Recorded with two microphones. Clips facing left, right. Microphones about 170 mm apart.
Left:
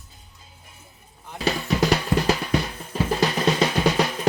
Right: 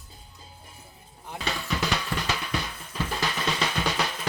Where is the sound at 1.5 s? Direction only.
40° left (ahead or behind).